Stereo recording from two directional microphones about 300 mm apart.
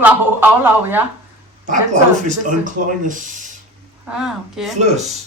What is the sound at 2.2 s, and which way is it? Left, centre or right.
Speech, right.